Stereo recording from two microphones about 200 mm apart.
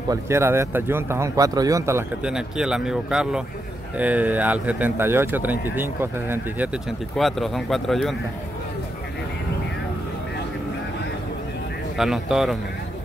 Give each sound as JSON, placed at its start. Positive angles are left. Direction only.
{"t": 0.1, "sound": "speech", "side_deg": -15}
{"t": 12.0, "sound": "speech", "side_deg": 0}